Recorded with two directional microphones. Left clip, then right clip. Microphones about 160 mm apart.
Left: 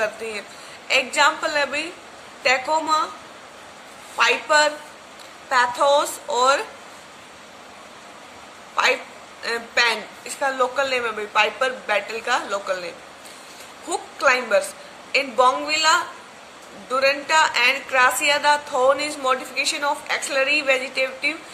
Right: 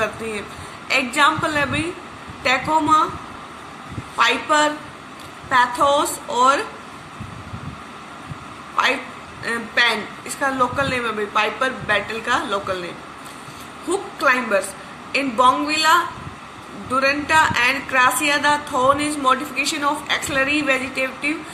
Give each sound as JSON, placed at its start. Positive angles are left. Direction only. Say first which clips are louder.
{"t": 0.9, "sound": "a woman's voice", "louder": "right 1 dB", "side_deg": 30}
{"t": 4.2, "sound": "a woman's voice", "louder": "right 1 dB", "side_deg": 35}
{"t": 9.4, "sound": "a woman's voice", "louder": "right 2 dB", "side_deg": 40}
{"t": 14.2, "sound": "a woman's voice", "louder": "even", "side_deg": 40}